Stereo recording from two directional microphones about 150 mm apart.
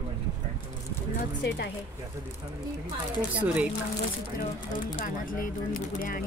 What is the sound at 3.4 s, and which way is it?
Speech, 10° right (ahead or behind).